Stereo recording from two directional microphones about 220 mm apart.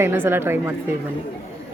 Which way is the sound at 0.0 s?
10° right (ahead or behind).